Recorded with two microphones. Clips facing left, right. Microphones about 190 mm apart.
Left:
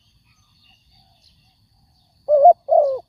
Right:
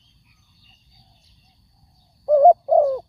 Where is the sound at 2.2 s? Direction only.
5° left (ahead or behind).